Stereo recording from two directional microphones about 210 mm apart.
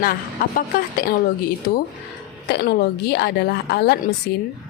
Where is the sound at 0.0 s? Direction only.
45° left (ahead or behind).